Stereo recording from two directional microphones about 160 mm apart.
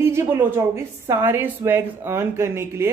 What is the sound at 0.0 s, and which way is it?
A woman's voice, 15° right (ahead or behind).